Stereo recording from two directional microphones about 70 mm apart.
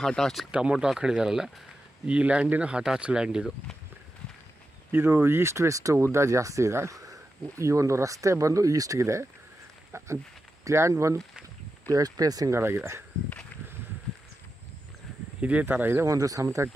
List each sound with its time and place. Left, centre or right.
0.0 s speech: centre
0.5 s speech: centre
4.9 s speech: right
11.9 s speech: right
12.4 s speech: right
15.7 s speech: right
16.0 s speech: right